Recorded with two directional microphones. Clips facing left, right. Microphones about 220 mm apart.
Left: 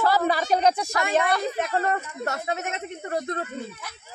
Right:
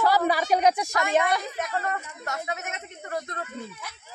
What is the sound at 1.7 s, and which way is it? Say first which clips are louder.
A man's voice: left 5 dB; 35° left (ahead or behind).